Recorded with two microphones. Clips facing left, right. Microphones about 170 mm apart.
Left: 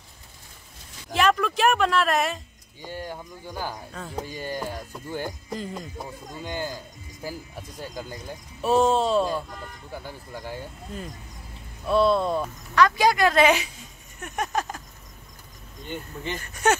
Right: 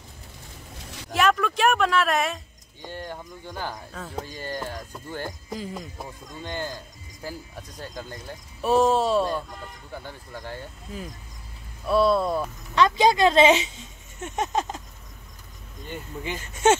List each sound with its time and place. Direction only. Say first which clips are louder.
1.1 s speech: even; centre (ahead or behind)
4.2 s speech: left 2 dB; 15° left (ahead or behind)
5.5 s speech: left 1 dB; centre (ahead or behind)
6.4 s speech: even; 10° left (ahead or behind)
8.5 s speech: even; centre (ahead or behind)
10.0 s speech: left 1 dB; 10° left (ahead or behind)
11.8 s speech: even; centre (ahead or behind)
12.7 s speech: right 1 dB; 20° right (ahead or behind)
15.9 s speech: even; 10° right (ahead or behind)